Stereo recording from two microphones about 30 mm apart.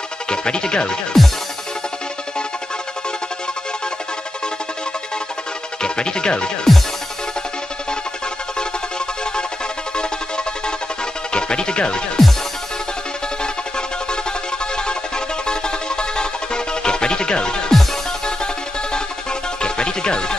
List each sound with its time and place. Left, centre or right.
0.3 s speech: left
1.1 s music: centre
5.8 s chopping: left
9.9 s music: left
14.8 s music: left
19.6 s music: left